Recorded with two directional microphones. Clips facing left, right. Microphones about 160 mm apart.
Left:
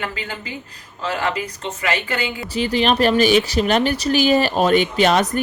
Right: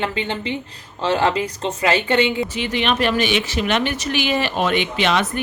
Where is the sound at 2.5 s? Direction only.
35° left (ahead or behind).